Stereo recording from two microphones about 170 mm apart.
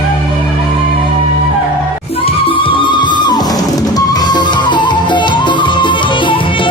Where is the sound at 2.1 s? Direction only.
35° left (ahead or behind).